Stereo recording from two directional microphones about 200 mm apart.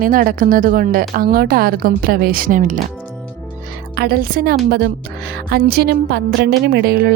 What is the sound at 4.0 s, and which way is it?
A woman's voice, 50° right (ahead or behind).